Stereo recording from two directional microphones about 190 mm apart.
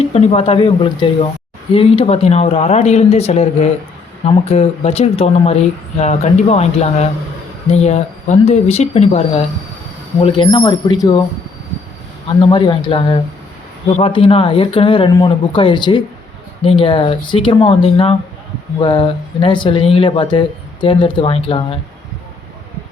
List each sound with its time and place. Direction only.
0.1 s speech: 30° left (ahead or behind)
12.4 s speech: 25° left (ahead or behind)